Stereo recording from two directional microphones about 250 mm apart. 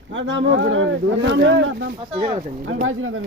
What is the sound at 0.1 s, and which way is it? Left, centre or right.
Speech, right.